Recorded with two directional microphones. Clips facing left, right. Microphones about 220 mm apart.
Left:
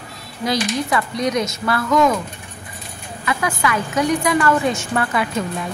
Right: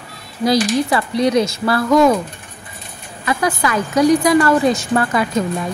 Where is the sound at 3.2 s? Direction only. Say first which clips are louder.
Right 3 dB; 35° right (ahead or behind).